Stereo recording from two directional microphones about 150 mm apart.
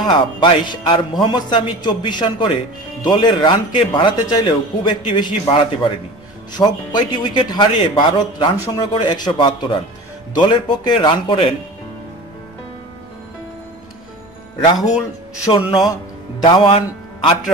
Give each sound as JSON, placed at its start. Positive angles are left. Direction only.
{"t": 0.0, "sound": "speech", "side_deg": 30}
{"t": 15.5, "sound": "speech", "side_deg": 35}